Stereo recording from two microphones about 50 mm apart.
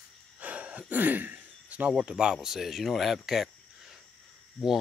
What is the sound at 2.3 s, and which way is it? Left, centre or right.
Speech, centre.